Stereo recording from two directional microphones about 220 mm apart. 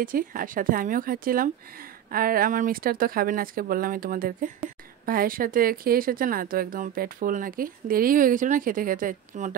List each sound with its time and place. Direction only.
0.0 s speech: 40° right (ahead or behind)